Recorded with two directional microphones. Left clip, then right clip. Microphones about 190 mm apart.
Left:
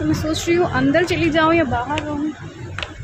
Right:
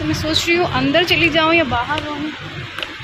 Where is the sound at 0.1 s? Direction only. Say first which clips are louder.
Right 4 dB; 15° left (ahead or behind).